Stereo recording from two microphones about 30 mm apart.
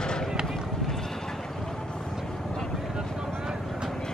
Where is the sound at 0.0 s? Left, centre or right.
Left.